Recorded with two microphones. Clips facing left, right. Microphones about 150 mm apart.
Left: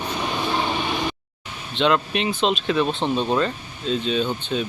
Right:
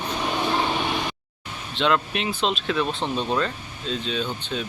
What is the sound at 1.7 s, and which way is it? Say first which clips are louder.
Speech: left 2 dB; centre (ahead or behind).